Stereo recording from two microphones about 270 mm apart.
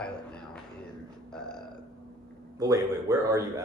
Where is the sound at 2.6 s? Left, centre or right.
Centre.